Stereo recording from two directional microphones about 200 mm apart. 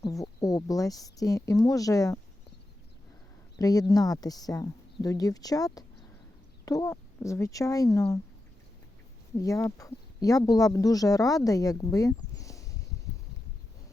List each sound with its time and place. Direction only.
0.0 s speech: 15° left (ahead or behind)
3.6 s speech: 20° left (ahead or behind)
9.4 s speech: 15° left (ahead or behind)